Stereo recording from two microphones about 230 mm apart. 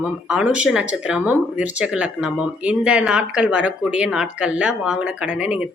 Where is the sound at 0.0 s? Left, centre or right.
Centre.